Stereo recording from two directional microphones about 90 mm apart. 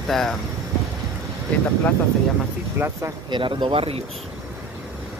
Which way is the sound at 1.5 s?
15° left (ahead or behind).